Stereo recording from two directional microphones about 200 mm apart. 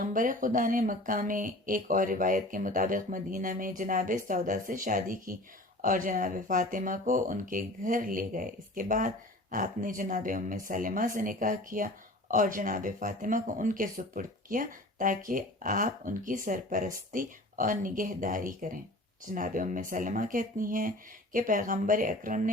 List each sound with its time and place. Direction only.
0.0 s speech: 45° right (ahead or behind)